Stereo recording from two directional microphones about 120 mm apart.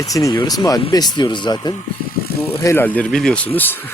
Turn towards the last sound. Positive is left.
turn(degrees=15)  # may be behind; listen again after turning